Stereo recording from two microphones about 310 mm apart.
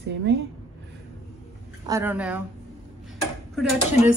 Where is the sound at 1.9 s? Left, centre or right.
Centre.